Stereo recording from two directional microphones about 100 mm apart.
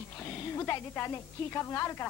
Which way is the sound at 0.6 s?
25° left (ahead or behind).